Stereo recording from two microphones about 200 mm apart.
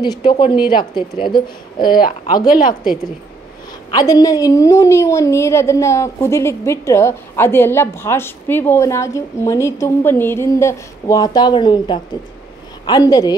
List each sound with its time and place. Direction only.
0.0 s speech: 20° left (ahead or behind)
1.8 s speech: 45° left (ahead or behind)
3.9 s a woman's voice: 20° left (ahead or behind)